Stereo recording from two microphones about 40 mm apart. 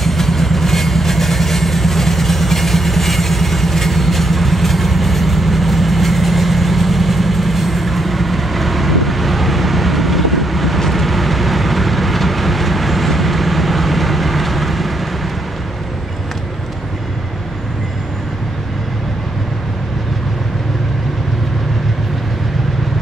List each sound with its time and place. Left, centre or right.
0.0 s vehicle: centre